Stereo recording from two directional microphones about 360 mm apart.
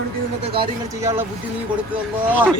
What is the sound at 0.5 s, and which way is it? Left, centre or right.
Speech, centre.